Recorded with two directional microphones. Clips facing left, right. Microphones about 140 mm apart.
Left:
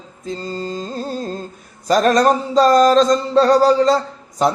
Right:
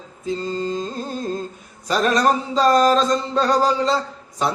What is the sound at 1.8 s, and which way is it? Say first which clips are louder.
A man's voice: left 5 dB; 40° left (ahead or behind).